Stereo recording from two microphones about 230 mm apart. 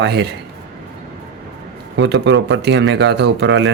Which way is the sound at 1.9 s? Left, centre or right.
Right.